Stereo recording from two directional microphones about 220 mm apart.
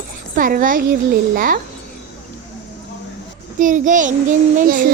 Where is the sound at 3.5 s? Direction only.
35° right (ahead or behind).